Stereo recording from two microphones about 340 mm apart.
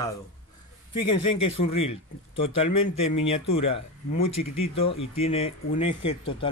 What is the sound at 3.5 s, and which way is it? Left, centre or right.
Speech, centre.